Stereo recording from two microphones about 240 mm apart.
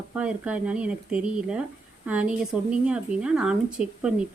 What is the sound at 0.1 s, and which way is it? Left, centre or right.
Speech, centre.